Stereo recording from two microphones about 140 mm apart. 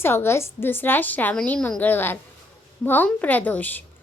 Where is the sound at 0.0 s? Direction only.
15° left (ahead or behind).